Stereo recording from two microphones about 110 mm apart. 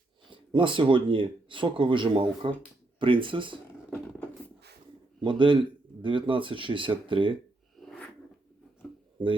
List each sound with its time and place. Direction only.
0.3 s speech: 50° right (ahead or behind)
5.2 s speech: 45° right (ahead or behind)